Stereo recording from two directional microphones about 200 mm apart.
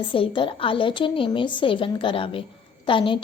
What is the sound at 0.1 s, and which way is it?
A woman's voice, 25° left (ahead or behind).